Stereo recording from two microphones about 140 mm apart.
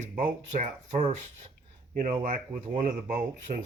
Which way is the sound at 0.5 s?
60° right (ahead or behind).